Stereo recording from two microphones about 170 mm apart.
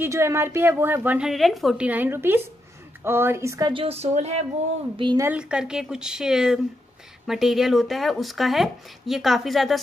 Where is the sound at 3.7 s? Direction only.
35° right (ahead or behind).